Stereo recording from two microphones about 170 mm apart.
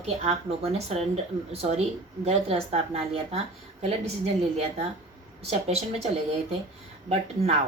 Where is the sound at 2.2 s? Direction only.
35° right (ahead or behind).